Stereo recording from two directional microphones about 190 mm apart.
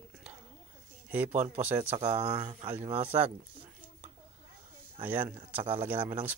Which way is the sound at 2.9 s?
10° right (ahead or behind).